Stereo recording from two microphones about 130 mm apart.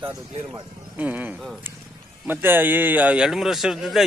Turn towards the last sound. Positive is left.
turn(degrees=0)  # may be behind; listen again after turning